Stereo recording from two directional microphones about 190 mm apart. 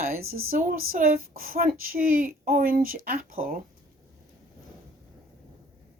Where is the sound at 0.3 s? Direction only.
90° right.